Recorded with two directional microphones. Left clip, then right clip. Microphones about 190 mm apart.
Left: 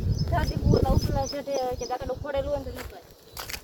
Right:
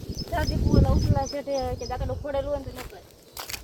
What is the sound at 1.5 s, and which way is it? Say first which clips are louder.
Speech: left 1 dB; 50° left (ahead or behind).